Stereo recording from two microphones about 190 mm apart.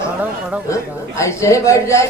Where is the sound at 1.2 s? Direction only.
15° left (ahead or behind).